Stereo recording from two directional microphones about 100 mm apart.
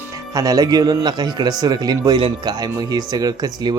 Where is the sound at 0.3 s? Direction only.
35° right (ahead or behind).